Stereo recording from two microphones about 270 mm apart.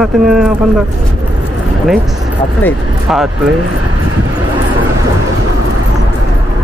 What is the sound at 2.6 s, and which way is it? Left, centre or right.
Speech, centre.